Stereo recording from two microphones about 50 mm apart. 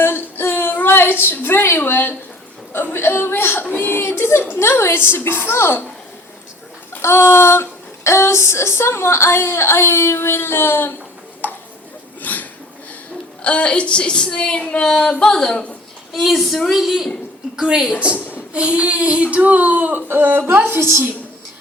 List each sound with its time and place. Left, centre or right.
0.0 s a sound: left
2.7 s speech: left
3.6 s a sound: left
4.6 s a woman's voice: left
7.0 s speech: left
8.0 s a woman's voice: left
11.4 s tick-tock: left
12.2 s a sound: left
13.4 s a woman's voice: left
16.1 s a woman's voice: centre; by 21.0 s right